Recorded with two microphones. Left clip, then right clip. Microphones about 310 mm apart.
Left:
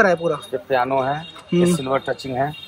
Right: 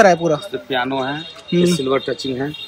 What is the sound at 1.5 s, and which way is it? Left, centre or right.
Speech, centre.